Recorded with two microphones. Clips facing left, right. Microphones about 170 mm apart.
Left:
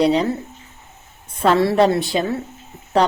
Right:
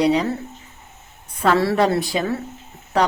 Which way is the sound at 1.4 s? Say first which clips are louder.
Left 2 dB; 20° left (ahead or behind).